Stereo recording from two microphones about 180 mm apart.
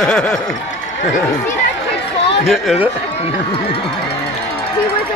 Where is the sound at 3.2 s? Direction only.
35° left (ahead or behind).